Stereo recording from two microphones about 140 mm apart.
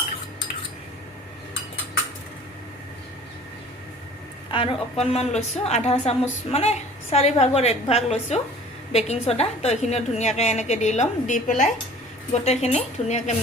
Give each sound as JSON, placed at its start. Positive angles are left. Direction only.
{"t": 4.5, "sound": "a woman's voice", "side_deg": 45}
{"t": 12.3, "sound": "a woman's voice", "side_deg": 50}